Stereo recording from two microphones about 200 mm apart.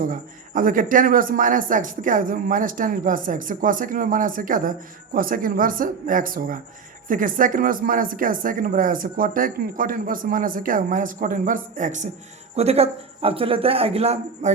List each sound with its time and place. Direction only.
0.1 s speech: 45° right (ahead or behind)